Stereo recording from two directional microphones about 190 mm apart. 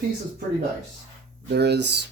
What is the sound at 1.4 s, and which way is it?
Speech, 60° right (ahead or behind).